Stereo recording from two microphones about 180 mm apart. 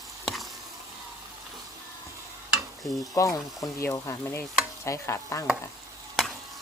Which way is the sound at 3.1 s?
20° left (ahead or behind).